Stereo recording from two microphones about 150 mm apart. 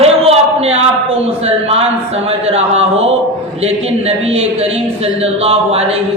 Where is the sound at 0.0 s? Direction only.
45° right (ahead or behind).